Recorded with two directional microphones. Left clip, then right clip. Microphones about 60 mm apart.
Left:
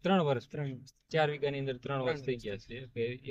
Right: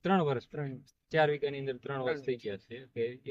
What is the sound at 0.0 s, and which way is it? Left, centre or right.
Speech, right.